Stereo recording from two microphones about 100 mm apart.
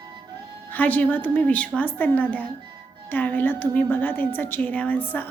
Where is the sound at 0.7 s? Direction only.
15° left (ahead or behind).